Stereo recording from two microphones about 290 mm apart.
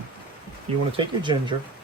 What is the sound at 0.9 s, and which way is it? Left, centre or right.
Speech, centre.